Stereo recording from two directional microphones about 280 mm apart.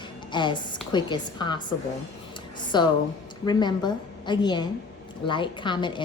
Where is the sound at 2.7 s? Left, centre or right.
Centre.